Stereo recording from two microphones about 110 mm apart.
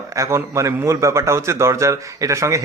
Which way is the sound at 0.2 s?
25° right (ahead or behind).